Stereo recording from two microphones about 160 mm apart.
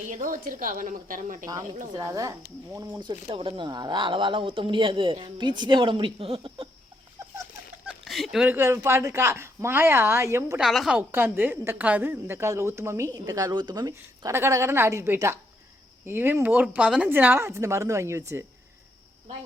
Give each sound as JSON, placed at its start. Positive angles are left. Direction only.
{"t": 0.1, "sound": "speech", "side_deg": -55}
{"t": 2.0, "sound": "a woman's voice", "side_deg": -20}
{"t": 3.0, "sound": "speech", "side_deg": -30}
{"t": 7.2, "sound": "a sound", "side_deg": -20}
{"t": 7.9, "sound": "a woman's voice", "side_deg": 0}
{"t": 10.6, "sound": "a woman's voice", "side_deg": 0}
{"t": 11.1, "sound": "a woman's voice", "side_deg": -10}